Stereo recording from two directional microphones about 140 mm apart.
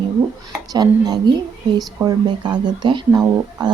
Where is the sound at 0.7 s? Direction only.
30° right (ahead or behind).